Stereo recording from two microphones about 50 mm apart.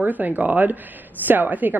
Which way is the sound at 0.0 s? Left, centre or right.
Right.